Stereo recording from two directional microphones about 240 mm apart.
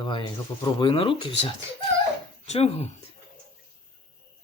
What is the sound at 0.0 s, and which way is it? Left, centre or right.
Speech, centre.